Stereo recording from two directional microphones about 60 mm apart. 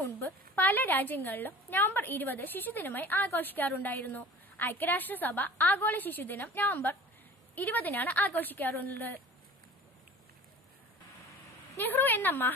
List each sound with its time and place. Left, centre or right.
0.0 s a woman's voice: left
11.8 s a woman's voice: left